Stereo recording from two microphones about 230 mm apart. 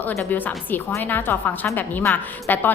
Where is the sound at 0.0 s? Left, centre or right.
Centre.